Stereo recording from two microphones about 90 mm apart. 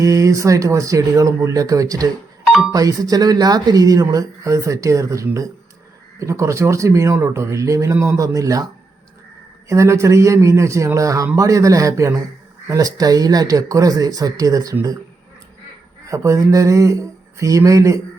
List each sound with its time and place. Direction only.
0.0 s speech: 40° right (ahead or behind)
16.0 s speech: 35° right (ahead or behind)